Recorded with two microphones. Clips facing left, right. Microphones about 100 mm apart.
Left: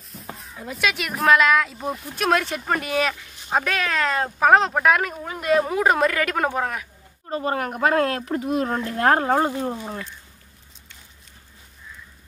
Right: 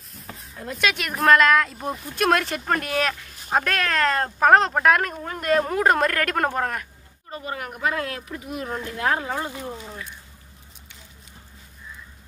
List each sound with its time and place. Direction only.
0.1 s speech: centre (ahead or behind)
7.2 s speech: 45° left (ahead or behind)